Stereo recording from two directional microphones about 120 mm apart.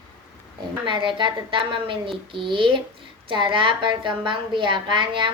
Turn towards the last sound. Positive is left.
turn(degrees=-40)  # may be behind; listen again after turning